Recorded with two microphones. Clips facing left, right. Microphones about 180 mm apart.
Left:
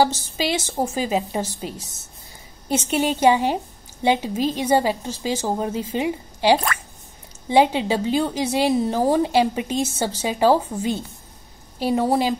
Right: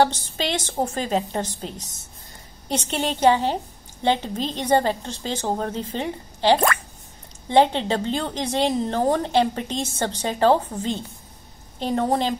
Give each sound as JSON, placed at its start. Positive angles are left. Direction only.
{"t": 0.0, "sound": "speech", "side_deg": 5}